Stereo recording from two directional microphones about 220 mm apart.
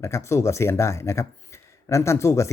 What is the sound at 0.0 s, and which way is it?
Speech, 15° left (ahead or behind).